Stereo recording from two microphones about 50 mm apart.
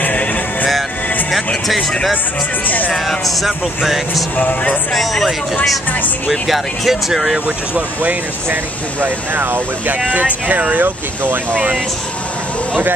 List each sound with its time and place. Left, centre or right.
0.0 s music: left
2.6 s speech: left
2.9 s speech: centre
4.4 s speech: left
4.9 s speech: centre
6.4 s speech: centre
7.4 s speech: right
9.0 s speech: right
10.0 s speech: right